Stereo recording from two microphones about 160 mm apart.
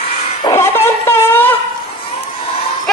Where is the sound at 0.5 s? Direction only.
15° left (ahead or behind).